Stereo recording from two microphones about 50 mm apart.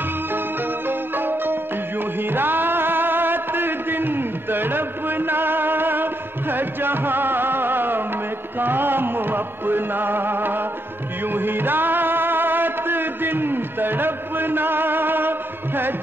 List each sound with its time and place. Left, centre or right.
0.3 s music: right